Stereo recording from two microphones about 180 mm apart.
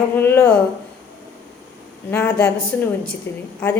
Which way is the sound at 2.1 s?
15° left (ahead or behind).